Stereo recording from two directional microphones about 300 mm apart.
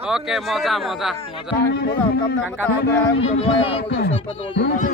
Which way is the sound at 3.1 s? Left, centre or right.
Centre.